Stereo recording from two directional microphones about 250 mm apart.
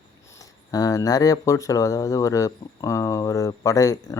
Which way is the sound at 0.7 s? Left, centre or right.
Centre.